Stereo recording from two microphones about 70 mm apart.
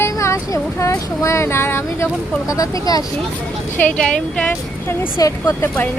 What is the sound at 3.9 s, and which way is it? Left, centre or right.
Speech, centre.